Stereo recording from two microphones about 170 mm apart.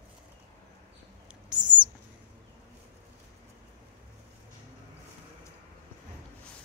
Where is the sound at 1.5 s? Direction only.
25° right (ahead or behind).